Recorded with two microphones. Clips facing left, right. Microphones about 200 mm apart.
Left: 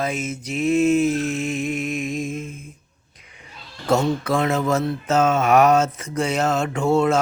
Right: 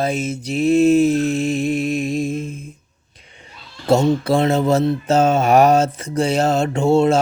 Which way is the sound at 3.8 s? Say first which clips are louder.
Right 4 dB; 30° right (ahead or behind).